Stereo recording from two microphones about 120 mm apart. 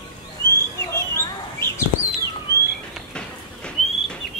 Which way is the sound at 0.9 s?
20° left (ahead or behind).